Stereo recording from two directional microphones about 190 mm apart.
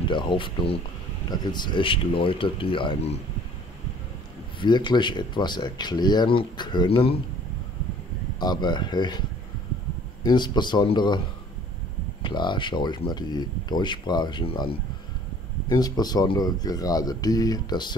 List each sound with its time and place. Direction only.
0.1 s speech: 25° left (ahead or behind)
4.6 s speech: 25° left (ahead or behind)
8.4 s speech: 20° left (ahead or behind)
10.2 s speech: 20° left (ahead or behind)
12.2 s speech: 25° left (ahead or behind)